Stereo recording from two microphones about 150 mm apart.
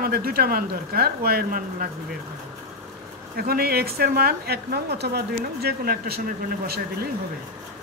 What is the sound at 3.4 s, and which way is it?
A woman's voice, 90° right.